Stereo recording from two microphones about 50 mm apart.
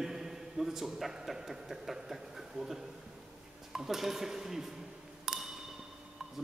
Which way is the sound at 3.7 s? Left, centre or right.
Centre.